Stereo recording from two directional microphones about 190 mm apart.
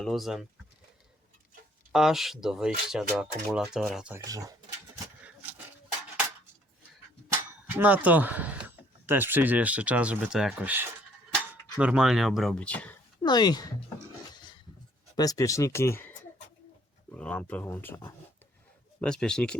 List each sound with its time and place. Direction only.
0.0 s speech: centre (ahead or behind)
1.9 s speech: centre (ahead or behind)
4.2 s speech: 20° right (ahead or behind)
5.2 s a sound: 5° right (ahead or behind)
7.7 s speech: 10° right (ahead or behind)
13.2 s speech: 20° left (ahead or behind)
15.1 s speech: 20° left (ahead or behind)